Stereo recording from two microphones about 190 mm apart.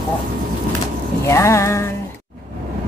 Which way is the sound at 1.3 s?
15° left (ahead or behind).